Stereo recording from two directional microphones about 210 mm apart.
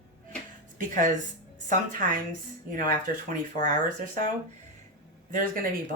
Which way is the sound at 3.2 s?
40° right (ahead or behind).